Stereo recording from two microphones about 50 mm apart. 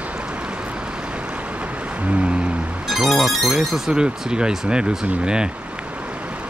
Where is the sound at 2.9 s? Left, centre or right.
Centre.